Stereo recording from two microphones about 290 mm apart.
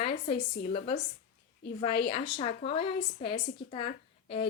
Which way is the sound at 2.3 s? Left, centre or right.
Left.